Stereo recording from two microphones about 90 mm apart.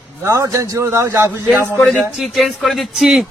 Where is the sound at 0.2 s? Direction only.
35° right (ahead or behind).